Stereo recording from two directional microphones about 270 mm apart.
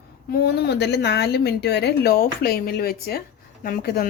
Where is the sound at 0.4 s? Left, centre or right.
Left.